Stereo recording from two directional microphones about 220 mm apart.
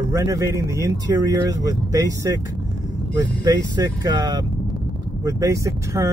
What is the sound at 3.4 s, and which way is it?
Speech, 15° right (ahead or behind).